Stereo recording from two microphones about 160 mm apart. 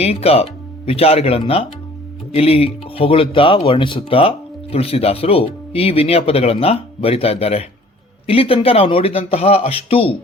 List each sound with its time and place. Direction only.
0.0 s speech: 40° left (ahead or behind)